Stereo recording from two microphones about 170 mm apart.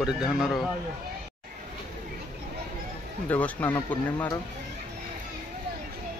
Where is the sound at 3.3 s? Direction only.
10° left (ahead or behind).